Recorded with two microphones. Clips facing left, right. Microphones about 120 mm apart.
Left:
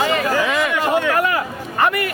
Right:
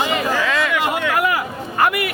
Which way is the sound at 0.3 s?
20° left (ahead or behind).